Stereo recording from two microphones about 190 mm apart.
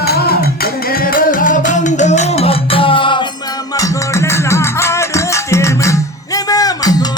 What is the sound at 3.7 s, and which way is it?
Music, 15° left (ahead or behind).